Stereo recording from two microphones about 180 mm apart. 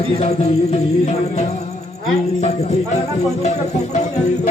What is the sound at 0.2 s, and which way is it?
Music, 35° left (ahead or behind).